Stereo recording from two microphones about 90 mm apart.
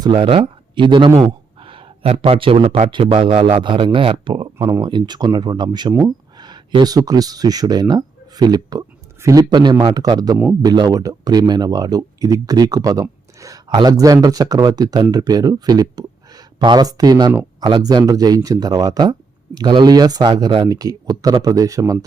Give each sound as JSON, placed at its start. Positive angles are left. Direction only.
{"t": 0.2, "sound": "speech", "side_deg": -90}
{"t": 1.2, "sound": "speech", "side_deg": -80}
{"t": 4.8, "sound": "speech", "side_deg": -55}
{"t": 17.6, "sound": "speech", "side_deg": -60}
{"t": 17.8, "sound": "a man's voice", "side_deg": -45}